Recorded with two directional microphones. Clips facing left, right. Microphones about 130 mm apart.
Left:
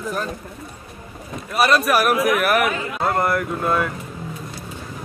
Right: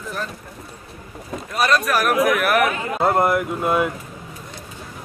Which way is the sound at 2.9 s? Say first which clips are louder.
Right 4 dB; 20° right (ahead or behind).